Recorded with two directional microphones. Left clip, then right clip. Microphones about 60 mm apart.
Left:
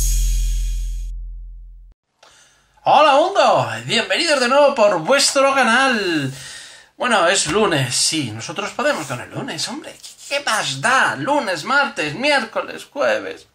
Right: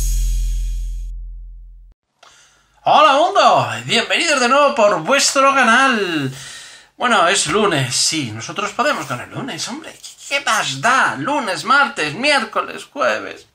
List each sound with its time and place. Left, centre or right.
0.0 s music: centre
2.8 s a sound: centre
3.4 s speech: centre; by 8.5 s left
8.5 s speech: centre
9.3 s speech: left
9.8 s speech: centre; by 11.3 s left
11.5 s speech: centre
12.9 s speech: centre